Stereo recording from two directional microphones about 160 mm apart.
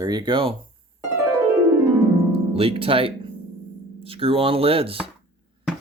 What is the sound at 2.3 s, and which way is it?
Speech, 35° right (ahead or behind).